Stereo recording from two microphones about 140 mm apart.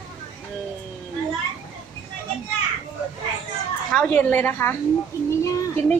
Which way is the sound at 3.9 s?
5° left (ahead or behind).